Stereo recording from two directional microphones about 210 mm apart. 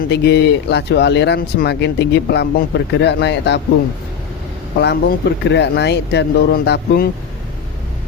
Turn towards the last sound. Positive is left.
turn(degrees=50)  # may be behind; listen again after turning